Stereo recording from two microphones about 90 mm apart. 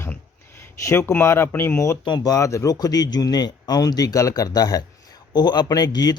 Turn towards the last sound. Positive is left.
turn(degrees=45)  # may be behind; listen again after turning